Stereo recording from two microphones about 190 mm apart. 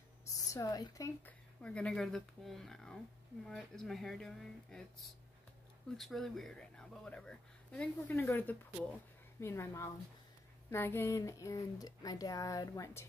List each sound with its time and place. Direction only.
0.5 s speech: 20° left (ahead or behind)
1.6 s speech: 5° left (ahead or behind)